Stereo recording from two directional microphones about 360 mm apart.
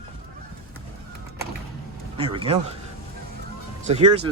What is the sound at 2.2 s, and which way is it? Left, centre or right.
Speech, centre.